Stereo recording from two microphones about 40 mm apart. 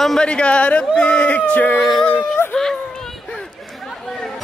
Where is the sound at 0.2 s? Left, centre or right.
Left.